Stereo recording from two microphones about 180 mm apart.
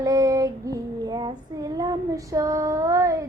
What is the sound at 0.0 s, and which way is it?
Child singing, 20° right (ahead or behind).